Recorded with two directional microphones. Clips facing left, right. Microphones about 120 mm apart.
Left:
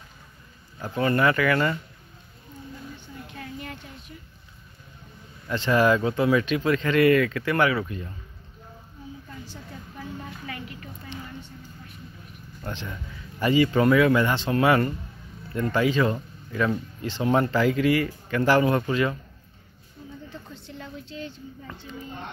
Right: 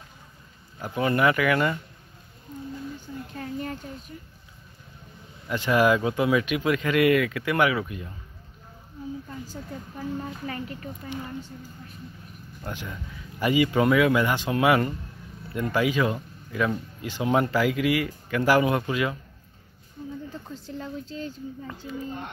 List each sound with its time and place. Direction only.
0.7 s speech: 15° right (ahead or behind)
3.3 s a sound: 40° right (ahead or behind)
5.5 s speech: 10° right (ahead or behind)
10.4 s a woman's voice: 35° right (ahead or behind)
12.6 s speech: 10° right (ahead or behind)
20.2 s speech: 40° right (ahead or behind)